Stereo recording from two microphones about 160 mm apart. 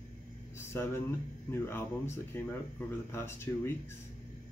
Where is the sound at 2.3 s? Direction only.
15° left (ahead or behind).